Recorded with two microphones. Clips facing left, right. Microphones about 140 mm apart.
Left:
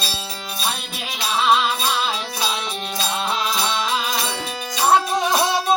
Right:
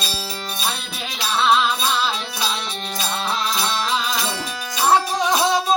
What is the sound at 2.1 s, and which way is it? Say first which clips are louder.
Music: even; 5° left (ahead or behind).